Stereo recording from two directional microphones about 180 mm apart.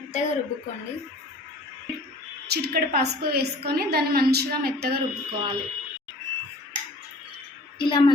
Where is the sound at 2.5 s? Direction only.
60° right (ahead or behind).